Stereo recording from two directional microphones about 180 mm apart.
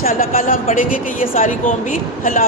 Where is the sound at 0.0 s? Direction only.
50° left (ahead or behind).